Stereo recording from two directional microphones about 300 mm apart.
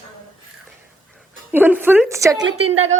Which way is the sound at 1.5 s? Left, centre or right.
Centre.